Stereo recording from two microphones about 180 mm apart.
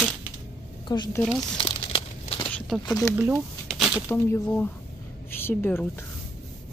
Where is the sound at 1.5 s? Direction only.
25° left (ahead or behind).